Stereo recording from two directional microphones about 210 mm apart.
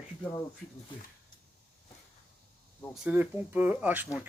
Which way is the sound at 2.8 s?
5° right (ahead or behind).